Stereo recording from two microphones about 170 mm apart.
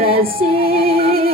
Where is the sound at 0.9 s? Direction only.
35° right (ahead or behind).